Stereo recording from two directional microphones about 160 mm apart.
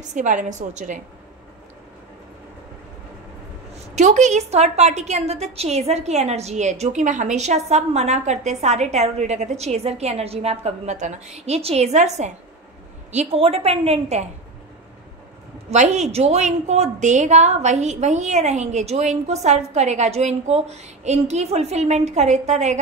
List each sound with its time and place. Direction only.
0.1 s a woman's voice: 50° right (ahead or behind)
3.9 s a woman's voice: 45° right (ahead or behind)
15.7 s a woman's voice: 45° right (ahead or behind)